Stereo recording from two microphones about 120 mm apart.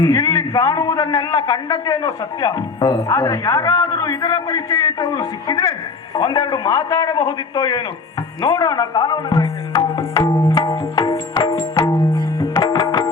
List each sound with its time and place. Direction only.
0.0 s a man's voice: 25° left (ahead or behind)
10.3 s music: 30° left (ahead or behind)